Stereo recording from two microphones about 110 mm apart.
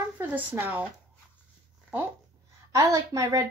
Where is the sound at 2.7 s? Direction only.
30° right (ahead or behind).